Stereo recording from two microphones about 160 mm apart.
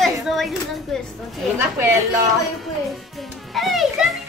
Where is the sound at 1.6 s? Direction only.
15° right (ahead or behind).